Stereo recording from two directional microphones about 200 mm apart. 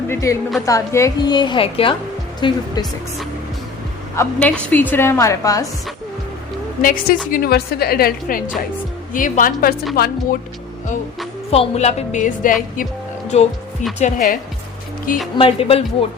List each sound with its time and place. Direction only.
0.1 s a woman's voice: 15° left (ahead or behind)
4.1 s a woman's voice: 10° left (ahead or behind)
6.8 s a woman's voice: 45° left (ahead or behind)
11.5 s a woman's voice: 30° left (ahead or behind)
12.7 s music: 40° left (ahead or behind)
14.0 s a woman's voice: 45° left (ahead or behind)
15.4 s a woman's voice: 25° left (ahead or behind)